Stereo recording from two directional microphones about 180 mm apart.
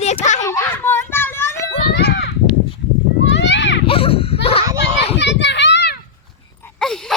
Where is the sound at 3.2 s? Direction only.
85° left.